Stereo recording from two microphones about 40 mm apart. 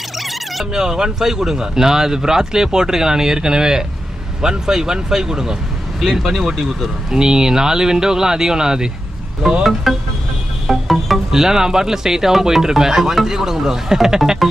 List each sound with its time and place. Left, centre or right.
0.2 s a sound: centre
0.7 s speech: centre
9.6 s music: centre
11.3 s speech: centre